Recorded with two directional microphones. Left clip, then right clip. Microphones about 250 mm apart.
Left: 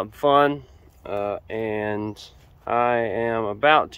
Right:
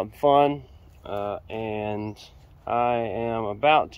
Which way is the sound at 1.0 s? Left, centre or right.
Left.